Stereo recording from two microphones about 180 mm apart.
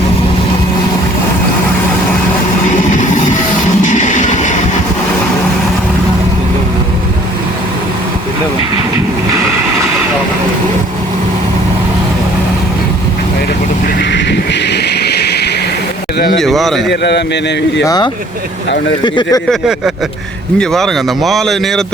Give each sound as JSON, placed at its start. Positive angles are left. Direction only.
{"t": 2.9, "sound": "music", "side_deg": 45}
{"t": 14.1, "sound": "a sound", "side_deg": 70}
{"t": 16.4, "sound": "a sound", "side_deg": 0}
{"t": 16.9, "sound": "a man's voice", "side_deg": 70}
{"t": 17.8, "sound": "speech", "side_deg": 20}
{"t": 19.5, "sound": "speech", "side_deg": -5}